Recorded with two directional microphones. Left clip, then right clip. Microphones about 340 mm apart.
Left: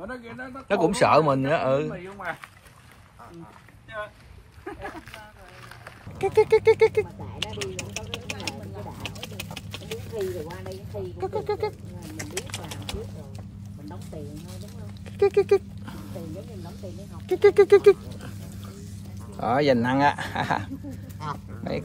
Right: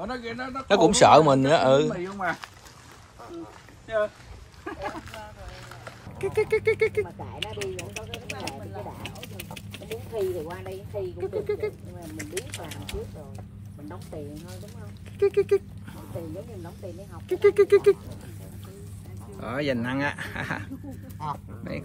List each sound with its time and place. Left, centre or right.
0.0 s a man's voice: right
0.7 s a man's voice: centre
1.9 s speech: right
6.1 s a sound: centre
11.1 s speech: centre
12.2 s a sound: centre
15.1 s speech: centre
17.3 s speech: centre
19.4 s speech: centre
21.2 s speech: centre
21.6 s speech: centre